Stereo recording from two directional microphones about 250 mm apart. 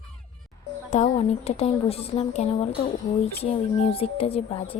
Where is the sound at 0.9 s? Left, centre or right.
Left.